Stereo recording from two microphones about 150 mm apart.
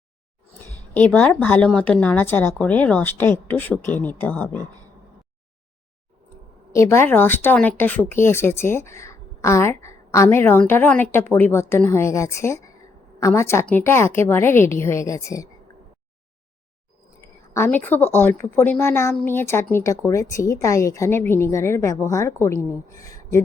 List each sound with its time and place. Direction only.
0.9 s speech: 10° left (ahead or behind)
6.7 s speech: 20° left (ahead or behind)
17.5 s a woman's voice: 15° left (ahead or behind)